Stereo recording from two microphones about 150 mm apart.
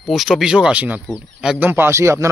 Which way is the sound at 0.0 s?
Centre (ahead or behind).